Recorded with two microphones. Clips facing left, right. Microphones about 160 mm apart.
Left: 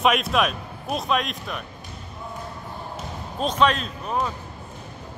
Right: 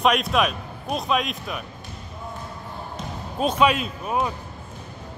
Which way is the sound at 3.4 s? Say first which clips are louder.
Right 1 dB; 10° right (ahead or behind).